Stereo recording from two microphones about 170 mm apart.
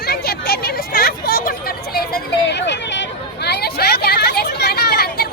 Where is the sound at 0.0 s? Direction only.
70° left (ahead or behind).